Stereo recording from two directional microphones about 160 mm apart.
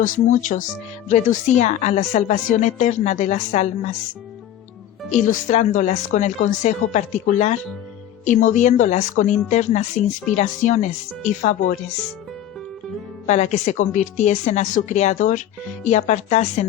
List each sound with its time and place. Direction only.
0.0 s a woman's voice: 55° left (ahead or behind)
5.1 s a woman's voice: 50° left (ahead or behind)
13.2 s a woman's voice: 45° left (ahead or behind)